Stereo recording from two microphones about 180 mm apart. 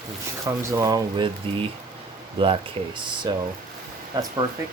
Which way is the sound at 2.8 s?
35° right (ahead or behind).